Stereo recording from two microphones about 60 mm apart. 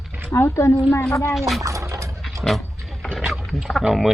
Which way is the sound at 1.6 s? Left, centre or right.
Right.